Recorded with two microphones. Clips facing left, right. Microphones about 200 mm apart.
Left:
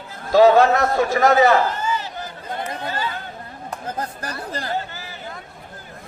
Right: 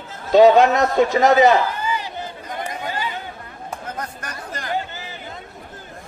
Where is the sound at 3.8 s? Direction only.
30° left (ahead or behind).